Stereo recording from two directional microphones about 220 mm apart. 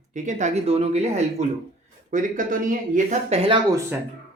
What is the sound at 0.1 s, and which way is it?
Speech, 35° right (ahead or behind).